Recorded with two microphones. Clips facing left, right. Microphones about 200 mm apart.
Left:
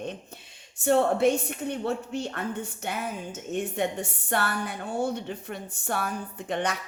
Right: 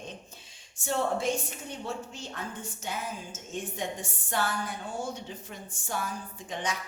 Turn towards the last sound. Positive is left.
turn(degrees=60)  # may be behind; listen again after turning